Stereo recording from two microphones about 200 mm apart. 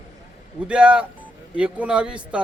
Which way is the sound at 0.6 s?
5° right (ahead or behind).